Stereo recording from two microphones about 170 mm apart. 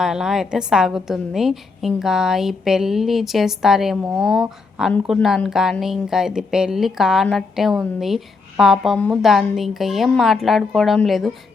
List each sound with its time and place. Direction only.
0.0 s a woman's voice: 5° right (ahead or behind)